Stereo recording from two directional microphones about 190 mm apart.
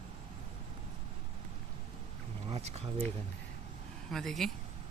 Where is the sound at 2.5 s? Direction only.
35° right (ahead or behind).